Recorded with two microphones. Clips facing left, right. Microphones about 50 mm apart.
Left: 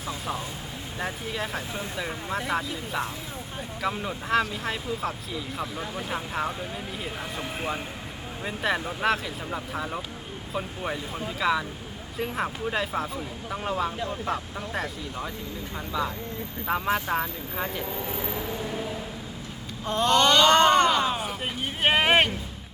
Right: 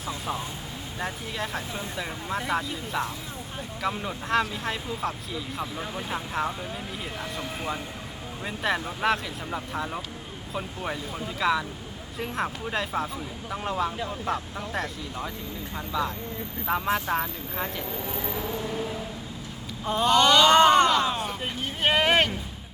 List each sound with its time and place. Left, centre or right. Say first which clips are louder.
0.9 s speech: left 1 dB; centre
7.3 s speech: left 1 dB; centre
8.4 s speech: even; centre
21.6 s speech: left 1 dB; centre